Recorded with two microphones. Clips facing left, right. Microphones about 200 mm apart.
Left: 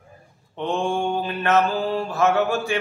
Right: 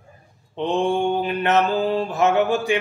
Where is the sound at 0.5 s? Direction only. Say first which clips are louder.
Right 3 dB; 20° right (ahead or behind).